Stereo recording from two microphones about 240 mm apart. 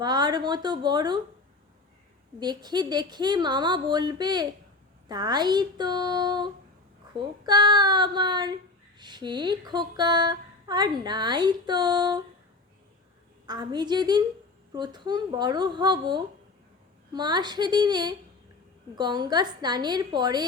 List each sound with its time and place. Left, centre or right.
0.0 s speech: centre
2.4 s speech: centre
13.5 s speech: centre